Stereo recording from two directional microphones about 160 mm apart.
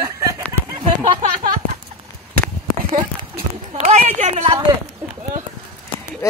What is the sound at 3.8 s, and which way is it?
Speech, 45° right (ahead or behind).